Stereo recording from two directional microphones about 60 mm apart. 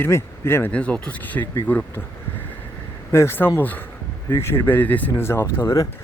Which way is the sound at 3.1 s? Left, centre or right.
Left.